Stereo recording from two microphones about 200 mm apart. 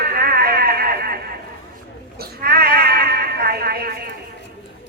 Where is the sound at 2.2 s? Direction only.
50° right (ahead or behind).